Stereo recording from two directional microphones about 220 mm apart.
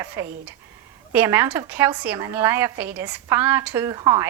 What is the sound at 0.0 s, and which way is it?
A woman's voice, 10° right (ahead or behind).